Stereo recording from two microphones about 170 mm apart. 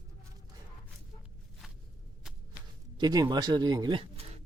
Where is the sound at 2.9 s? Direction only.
25° right (ahead or behind).